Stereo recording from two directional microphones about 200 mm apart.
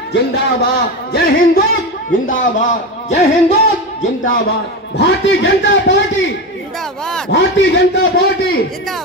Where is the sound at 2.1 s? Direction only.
40° left (ahead or behind).